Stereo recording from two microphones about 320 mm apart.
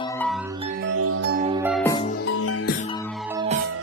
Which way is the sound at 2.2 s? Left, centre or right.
Left.